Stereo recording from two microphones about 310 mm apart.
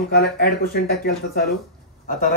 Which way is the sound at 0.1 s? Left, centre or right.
Left.